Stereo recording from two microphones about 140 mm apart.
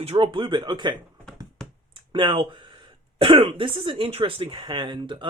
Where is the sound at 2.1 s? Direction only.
35° right (ahead or behind).